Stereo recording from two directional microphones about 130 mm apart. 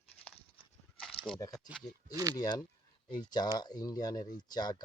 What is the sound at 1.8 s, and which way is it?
Speech, 30° left (ahead or behind).